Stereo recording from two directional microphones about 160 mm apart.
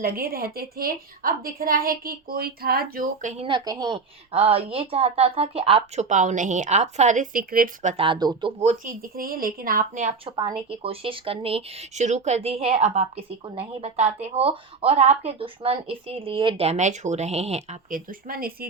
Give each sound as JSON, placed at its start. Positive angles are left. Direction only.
{"t": 0.0, "sound": "a woman's voice", "side_deg": -70}
{"t": 3.4, "sound": "a woman's voice", "side_deg": -25}
{"t": 4.3, "sound": "speech", "side_deg": -40}
{"t": 6.1, "sound": "a woman's voice", "side_deg": -50}
{"t": 8.0, "sound": "speech", "side_deg": -30}
{"t": 8.5, "sound": "speech", "side_deg": -50}
{"t": 10.2, "sound": "speech", "side_deg": -30}
{"t": 17.9, "sound": "a woman's voice", "side_deg": -65}